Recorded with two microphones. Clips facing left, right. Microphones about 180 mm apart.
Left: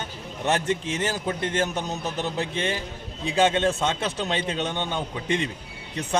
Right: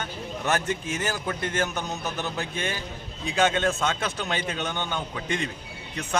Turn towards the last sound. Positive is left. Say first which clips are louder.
# left 3 dB
turn(degrees=25)  # may be behind; listen again after turning